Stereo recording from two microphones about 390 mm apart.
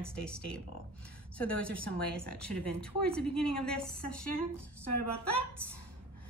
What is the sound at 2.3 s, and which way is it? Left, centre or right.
A woman's voice, centre.